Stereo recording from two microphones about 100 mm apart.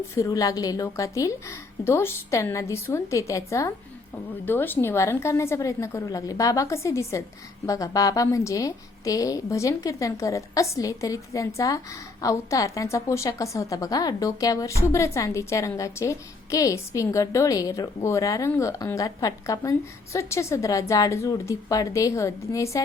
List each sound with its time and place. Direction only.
0.1 s a woman's voice: 35° left (ahead or behind)
4.4 s a woman's voice: 20° left (ahead or behind)